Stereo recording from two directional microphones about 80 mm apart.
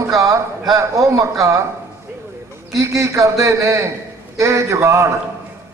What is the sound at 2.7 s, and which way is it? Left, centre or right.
A man's voice, right.